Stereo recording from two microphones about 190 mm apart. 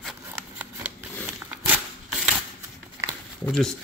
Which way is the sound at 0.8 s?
5° right (ahead or behind).